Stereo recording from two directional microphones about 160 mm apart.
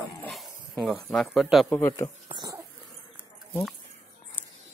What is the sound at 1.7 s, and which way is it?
Speech, 15° left (ahead or behind).